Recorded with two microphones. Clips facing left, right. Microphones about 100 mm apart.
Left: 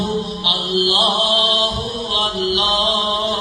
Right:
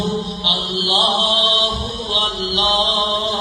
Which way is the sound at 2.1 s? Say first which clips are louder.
Left 3 dB; 25° right (ahead or behind).